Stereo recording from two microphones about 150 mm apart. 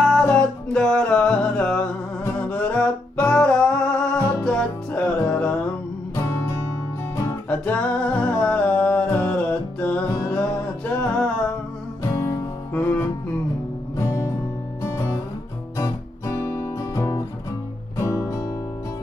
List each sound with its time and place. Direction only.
0.0 s music: 5° left (ahead or behind)
6.2 s music: 20° left (ahead or behind)
7.2 s music: 10° left (ahead or behind)
11.0 s music: 10° left (ahead or behind)
12.0 s music: 20° left (ahead or behind)
15.8 s guitar: 20° left (ahead or behind)
17.9 s music: 20° left (ahead or behind)